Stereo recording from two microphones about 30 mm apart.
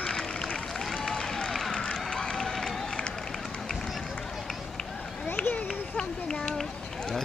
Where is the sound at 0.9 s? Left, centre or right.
Centre.